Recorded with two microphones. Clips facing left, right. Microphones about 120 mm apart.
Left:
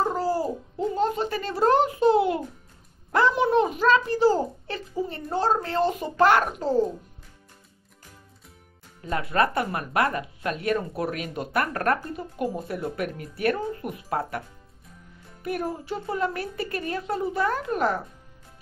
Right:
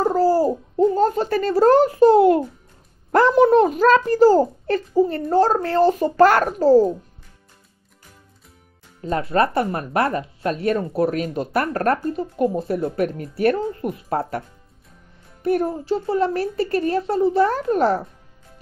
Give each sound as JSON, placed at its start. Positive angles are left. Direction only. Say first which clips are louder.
{"t": 0.0, "sound": "a sound", "louder": "right 8 dB", "side_deg": -40}
{"t": 3.1, "sound": "a woman's voice", "louder": "right 7 dB", "side_deg": -45}
{"t": 9.0, "sound": "speech", "louder": "right 4 dB", "side_deg": -30}
{"t": 15.4, "sound": "speech", "louder": "right 9 dB", "side_deg": -30}